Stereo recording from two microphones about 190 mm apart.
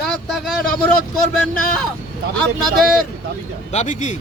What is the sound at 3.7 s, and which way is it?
Speech, 40° left (ahead or behind).